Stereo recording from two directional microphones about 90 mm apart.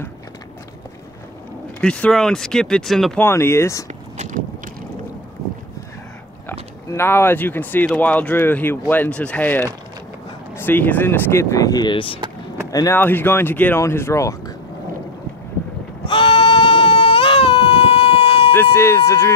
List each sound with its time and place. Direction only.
1.8 s speech: 10° left (ahead or behind)
3.2 s speech: 30° left (ahead or behind)
6.9 s speech: 30° left (ahead or behind)
11.5 s speech: 45° left (ahead or behind)
11.9 s speech: 85° left
12.9 s speech: 25° left (ahead or behind)
16.1 s baby cry: 75° left (ahead or behind); by 18.5 s 90° left
18.5 s speech: 25° left (ahead or behind)